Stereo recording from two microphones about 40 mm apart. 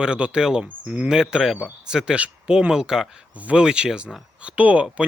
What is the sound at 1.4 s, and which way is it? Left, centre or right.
Speech, centre.